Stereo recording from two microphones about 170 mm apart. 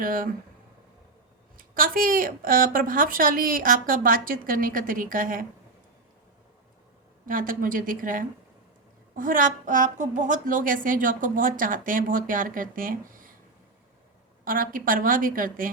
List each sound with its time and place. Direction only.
0.0 s a woman's voice: 55° right (ahead or behind)
1.5 s a woman's voice: 55° right (ahead or behind)
7.3 s a woman's voice: 55° right (ahead or behind)
14.4 s a woman's voice: 55° right (ahead or behind)